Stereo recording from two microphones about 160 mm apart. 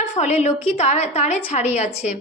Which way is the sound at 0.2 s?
45° left (ahead or behind).